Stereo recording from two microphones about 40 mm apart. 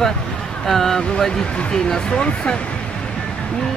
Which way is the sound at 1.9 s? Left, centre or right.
Left.